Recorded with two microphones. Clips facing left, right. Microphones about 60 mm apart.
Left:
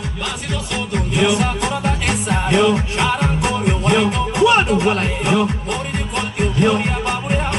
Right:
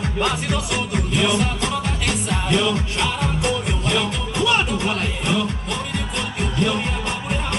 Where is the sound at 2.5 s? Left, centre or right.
Left.